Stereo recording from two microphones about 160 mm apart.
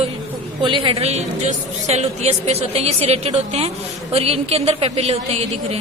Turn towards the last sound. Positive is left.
turn(degrees=-40)  # may be behind; listen again after turning